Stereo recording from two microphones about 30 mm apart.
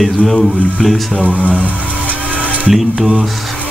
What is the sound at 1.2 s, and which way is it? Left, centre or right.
Speech, right.